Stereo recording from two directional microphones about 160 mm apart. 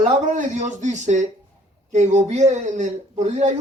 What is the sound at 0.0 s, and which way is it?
Speech, 50° right (ahead or behind).